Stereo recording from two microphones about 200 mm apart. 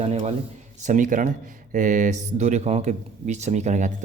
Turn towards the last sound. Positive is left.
turn(degrees=-35)  # may be behind; listen again after turning